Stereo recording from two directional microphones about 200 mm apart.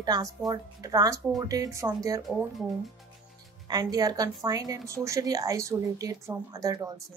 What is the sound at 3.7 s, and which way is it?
A woman's voice, 20° right (ahead or behind).